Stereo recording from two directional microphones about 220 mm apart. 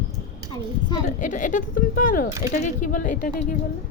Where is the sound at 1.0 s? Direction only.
35° left (ahead or behind).